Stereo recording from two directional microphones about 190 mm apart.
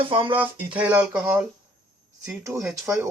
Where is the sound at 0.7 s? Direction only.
10° right (ahead or behind).